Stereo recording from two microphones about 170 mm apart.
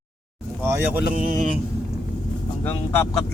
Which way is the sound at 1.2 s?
50° right (ahead or behind).